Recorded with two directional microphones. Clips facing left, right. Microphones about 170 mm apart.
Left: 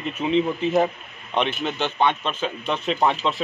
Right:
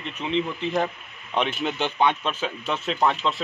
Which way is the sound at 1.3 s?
5° right (ahead or behind).